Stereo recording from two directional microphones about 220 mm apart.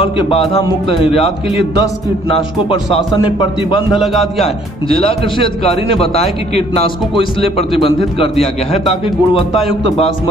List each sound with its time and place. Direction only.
0.0 s a man's voice: 25° left (ahead or behind)
3.9 s a man's voice: centre (ahead or behind)
4.8 s a man's voice: 25° left (ahead or behind)